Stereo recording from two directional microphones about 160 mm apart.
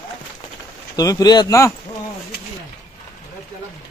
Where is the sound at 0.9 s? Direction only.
25° left (ahead or behind).